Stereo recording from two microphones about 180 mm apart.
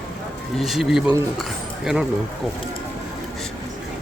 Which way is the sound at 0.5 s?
Centre (ahead or behind).